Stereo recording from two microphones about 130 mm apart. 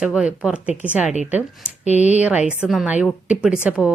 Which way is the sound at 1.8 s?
65° left (ahead or behind).